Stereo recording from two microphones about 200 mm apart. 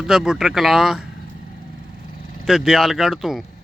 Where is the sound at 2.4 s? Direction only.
Centre (ahead or behind).